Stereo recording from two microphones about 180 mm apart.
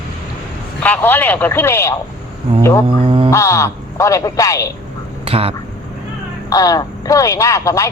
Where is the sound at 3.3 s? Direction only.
15° left (ahead or behind).